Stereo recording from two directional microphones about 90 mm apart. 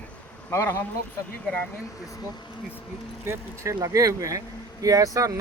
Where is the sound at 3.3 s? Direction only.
30° right (ahead or behind).